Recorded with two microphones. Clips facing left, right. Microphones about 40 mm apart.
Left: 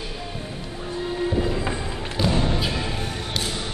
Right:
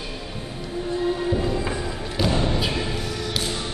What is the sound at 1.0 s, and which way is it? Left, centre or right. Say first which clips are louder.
Music: even; centre.